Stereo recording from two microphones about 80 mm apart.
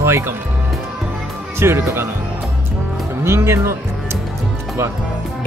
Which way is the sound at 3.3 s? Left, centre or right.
Right.